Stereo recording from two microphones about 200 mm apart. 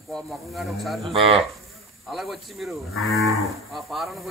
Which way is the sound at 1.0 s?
30° right (ahead or behind).